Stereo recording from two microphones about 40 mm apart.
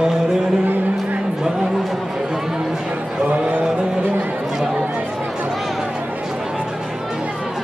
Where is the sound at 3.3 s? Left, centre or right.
Right.